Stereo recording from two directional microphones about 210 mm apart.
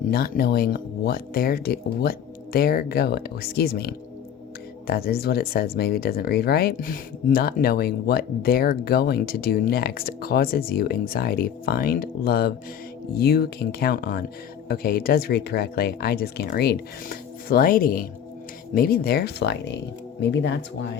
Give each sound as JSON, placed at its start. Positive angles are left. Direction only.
{"t": 0.1, "sound": "speech", "side_deg": 45}